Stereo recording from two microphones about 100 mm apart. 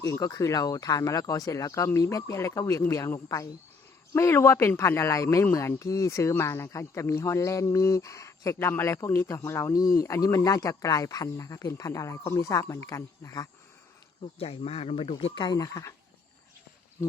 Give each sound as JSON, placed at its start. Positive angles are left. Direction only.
{"t": 0.1, "sound": "speech", "side_deg": 35}
{"t": 14.2, "sound": "speech", "side_deg": 65}
{"t": 15.4, "sound": "speech", "side_deg": 35}